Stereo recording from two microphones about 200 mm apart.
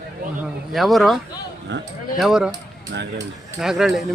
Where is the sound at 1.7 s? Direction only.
60° right (ahead or behind).